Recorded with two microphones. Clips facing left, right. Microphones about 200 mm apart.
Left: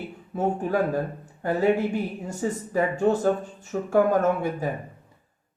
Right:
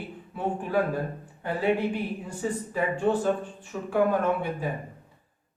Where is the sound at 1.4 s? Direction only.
45° left (ahead or behind).